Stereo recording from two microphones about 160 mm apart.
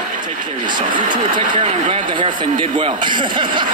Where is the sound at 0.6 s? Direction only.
30° right (ahead or behind).